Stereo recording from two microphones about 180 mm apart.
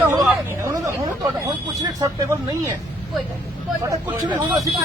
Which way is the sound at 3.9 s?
25° right (ahead or behind).